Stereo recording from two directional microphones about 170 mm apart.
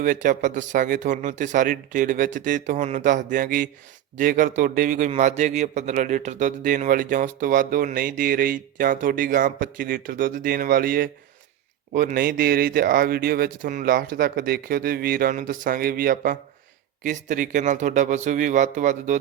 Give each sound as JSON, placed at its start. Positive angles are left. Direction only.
{"t": 0.0, "sound": "a man's voice", "side_deg": -50}
{"t": 17.0, "sound": "a man's voice", "side_deg": -45}